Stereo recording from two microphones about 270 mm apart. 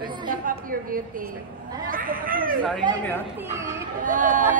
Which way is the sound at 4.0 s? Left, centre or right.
Right.